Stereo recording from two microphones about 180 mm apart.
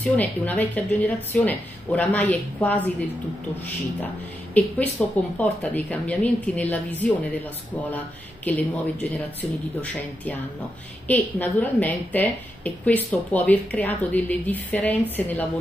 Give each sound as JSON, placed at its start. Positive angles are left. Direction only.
{"t": 0.0, "sound": "a woman's voice", "side_deg": 10}
{"t": 4.6, "sound": "a woman's voice", "side_deg": 10}